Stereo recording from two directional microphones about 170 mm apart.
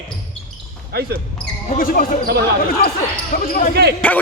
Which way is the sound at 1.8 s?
55° left (ahead or behind).